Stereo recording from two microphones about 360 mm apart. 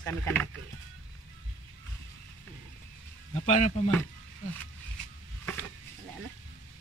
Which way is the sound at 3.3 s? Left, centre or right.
Centre.